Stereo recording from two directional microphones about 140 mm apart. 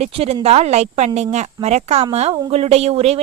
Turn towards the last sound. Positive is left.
turn(degrees=-45)  # may be behind; listen again after turning